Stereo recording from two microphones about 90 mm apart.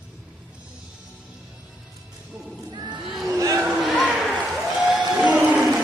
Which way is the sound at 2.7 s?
50° right (ahead or behind).